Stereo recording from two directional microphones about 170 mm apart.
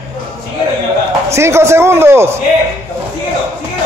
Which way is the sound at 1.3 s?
15° right (ahead or behind).